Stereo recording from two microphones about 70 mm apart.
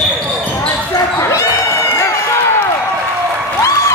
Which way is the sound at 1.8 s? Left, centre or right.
Left.